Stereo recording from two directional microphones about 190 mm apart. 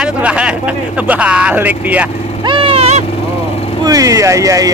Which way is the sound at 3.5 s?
30° left (ahead or behind).